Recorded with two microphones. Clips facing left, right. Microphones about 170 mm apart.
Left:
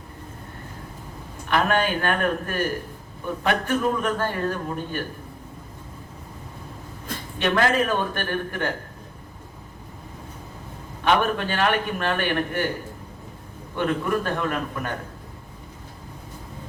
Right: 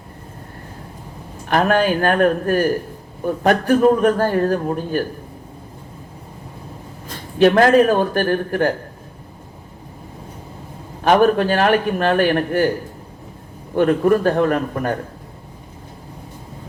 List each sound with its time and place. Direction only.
1.5 s a man's voice: 40° right (ahead or behind)
7.3 s a man's voice: 40° right (ahead or behind)
11.0 s a man's voice: 40° right (ahead or behind)
13.7 s a man's voice: 45° right (ahead or behind)